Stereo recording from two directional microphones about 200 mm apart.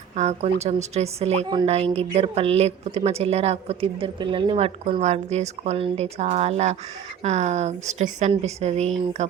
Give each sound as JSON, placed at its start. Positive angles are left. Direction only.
{"t": 0.2, "sound": "a woman's voice", "side_deg": -35}